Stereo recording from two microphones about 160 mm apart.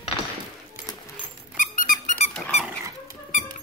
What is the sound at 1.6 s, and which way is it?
Squeak, 55° left (ahead or behind).